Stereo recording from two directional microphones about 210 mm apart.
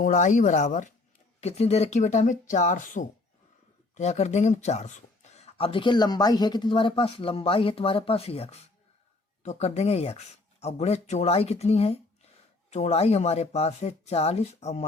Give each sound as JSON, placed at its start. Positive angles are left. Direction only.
{"t": 0.0, "sound": "speech", "side_deg": 35}